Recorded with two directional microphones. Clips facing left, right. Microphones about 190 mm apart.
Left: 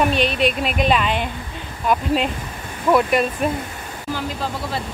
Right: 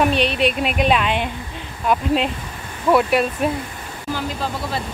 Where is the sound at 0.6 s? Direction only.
5° right (ahead or behind).